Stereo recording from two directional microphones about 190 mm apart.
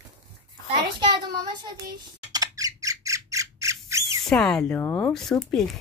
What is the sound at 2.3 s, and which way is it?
Squawk, 20° right (ahead or behind).